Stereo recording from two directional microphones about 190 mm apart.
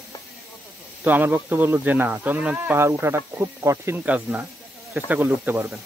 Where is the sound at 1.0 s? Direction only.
10° right (ahead or behind).